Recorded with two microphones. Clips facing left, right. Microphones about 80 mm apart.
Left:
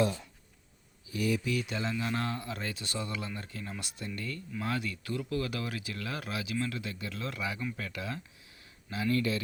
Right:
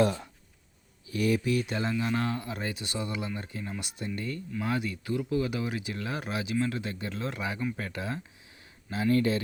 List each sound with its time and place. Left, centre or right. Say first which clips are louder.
0.0 s speech: right 4 dB; right
1.1 s speech: right 4 dB; right
1.5 s speech: right 4 dB; right
1.9 s speech: right 4 dB; centre
4.0 s speech: right 4 dB; right